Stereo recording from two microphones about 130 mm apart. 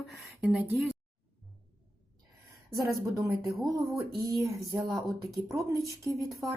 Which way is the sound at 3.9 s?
25° right (ahead or behind).